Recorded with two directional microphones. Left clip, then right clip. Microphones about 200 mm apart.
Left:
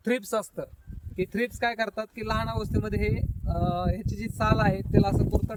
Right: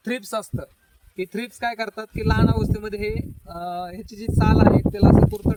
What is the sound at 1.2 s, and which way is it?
Speech, 40° left (ahead or behind).